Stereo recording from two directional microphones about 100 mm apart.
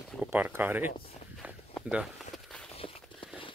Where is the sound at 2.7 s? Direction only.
70° left (ahead or behind).